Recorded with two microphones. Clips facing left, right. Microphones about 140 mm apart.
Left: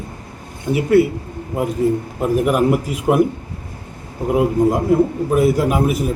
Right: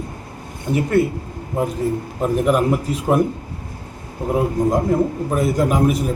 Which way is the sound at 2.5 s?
10° left (ahead or behind).